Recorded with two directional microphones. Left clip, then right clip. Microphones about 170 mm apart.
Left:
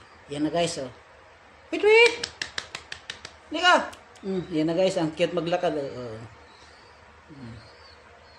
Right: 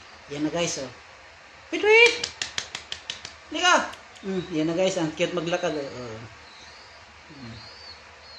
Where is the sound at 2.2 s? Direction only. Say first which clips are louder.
Right 2 dB; 30° left (ahead or behind).